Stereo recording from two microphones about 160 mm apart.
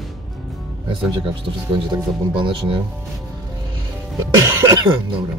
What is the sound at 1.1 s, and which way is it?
Speech, 30° right (ahead or behind).